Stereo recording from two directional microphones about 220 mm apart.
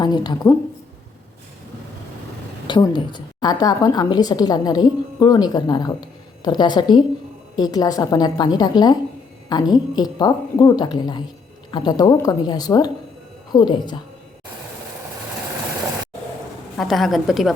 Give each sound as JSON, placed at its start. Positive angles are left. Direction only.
{"t": 0.0, "sound": "a woman's voice", "side_deg": 20}
{"t": 2.6, "sound": "a woman's voice", "side_deg": 20}
{"t": 16.7, "sound": "a woman's voice", "side_deg": 0}